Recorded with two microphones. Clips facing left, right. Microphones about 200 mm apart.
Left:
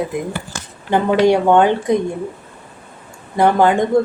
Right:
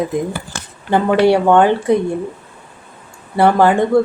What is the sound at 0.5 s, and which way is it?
Dishes, 65° right (ahead or behind).